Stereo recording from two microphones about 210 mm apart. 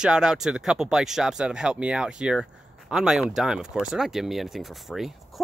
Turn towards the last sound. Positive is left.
turn(degrees=0)  # may be behind; listen again after turning